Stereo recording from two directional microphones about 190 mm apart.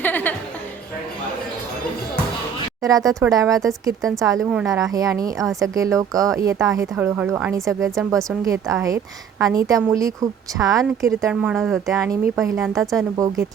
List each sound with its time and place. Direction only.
0.0 s music: 10° left (ahead or behind)
2.8 s speech: 20° right (ahead or behind); by 11.9 s centre (ahead or behind)
11.9 s speech: 15° right (ahead or behind)
12.5 s speech: centre (ahead or behind)
13.1 s speech: 15° right (ahead or behind)